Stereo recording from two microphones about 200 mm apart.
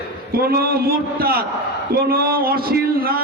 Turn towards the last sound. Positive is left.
turn(degrees=-50)  # may be behind; listen again after turning